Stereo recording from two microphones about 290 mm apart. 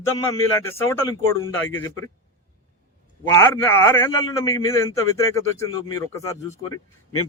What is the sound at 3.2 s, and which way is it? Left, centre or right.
A man's voice, centre.